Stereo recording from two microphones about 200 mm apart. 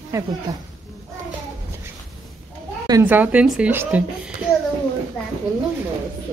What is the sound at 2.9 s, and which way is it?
Speech, 10° right (ahead or behind).